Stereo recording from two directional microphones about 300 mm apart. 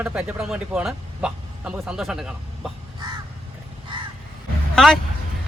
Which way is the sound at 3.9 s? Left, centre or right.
Centre.